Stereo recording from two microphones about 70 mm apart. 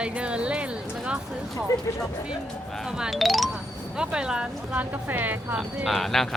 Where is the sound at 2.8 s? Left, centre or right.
Centre.